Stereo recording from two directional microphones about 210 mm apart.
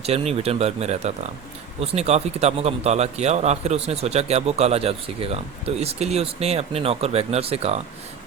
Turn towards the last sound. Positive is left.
turn(degrees=-30)  # may be behind; listen again after turning